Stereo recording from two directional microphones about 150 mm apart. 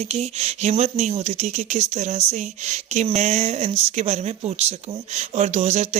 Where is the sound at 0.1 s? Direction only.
45° right (ahead or behind).